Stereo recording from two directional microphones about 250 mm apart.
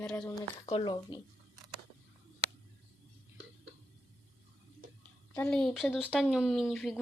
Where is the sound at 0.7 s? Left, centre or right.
Centre.